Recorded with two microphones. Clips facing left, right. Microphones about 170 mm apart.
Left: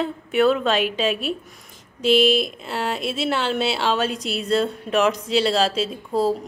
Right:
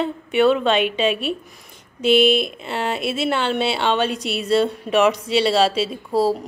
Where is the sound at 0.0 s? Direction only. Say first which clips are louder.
Right 2 dB; centre (ahead or behind).